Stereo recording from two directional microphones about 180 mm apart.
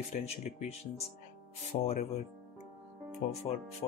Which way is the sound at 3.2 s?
45° left (ahead or behind).